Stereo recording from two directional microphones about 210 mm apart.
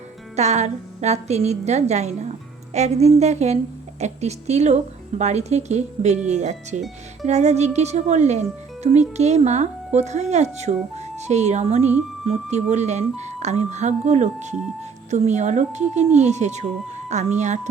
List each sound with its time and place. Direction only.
0.3 s speech: 30° right (ahead or behind)